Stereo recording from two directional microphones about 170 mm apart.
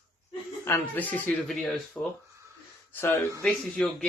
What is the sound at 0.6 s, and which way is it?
Speech, 10° left (ahead or behind).